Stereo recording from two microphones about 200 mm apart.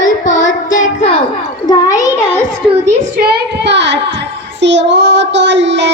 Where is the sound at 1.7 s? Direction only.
15° left (ahead or behind).